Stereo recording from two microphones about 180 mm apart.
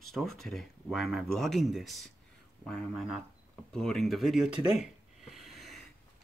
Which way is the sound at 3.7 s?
5° left (ahead or behind).